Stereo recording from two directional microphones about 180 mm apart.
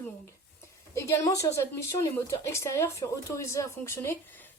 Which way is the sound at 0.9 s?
15° left (ahead or behind).